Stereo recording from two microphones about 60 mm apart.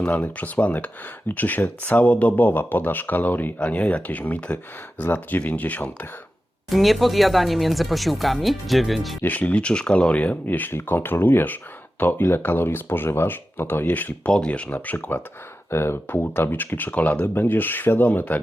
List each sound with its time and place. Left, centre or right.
0.0 s speech: left
6.7 s speech: centre
9.2 s speech: left
15.7 s speech: left
16.0 s speech: left